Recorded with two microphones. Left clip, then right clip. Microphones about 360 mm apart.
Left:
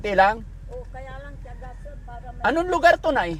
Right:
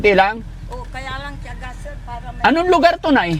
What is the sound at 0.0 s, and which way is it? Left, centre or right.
Speech, right.